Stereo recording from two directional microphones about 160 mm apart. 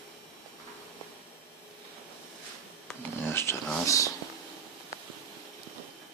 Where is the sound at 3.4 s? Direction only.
15° left (ahead or behind).